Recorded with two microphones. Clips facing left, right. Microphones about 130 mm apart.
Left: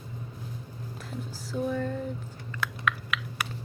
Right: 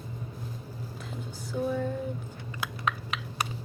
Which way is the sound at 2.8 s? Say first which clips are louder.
Even; 30° right (ahead or behind).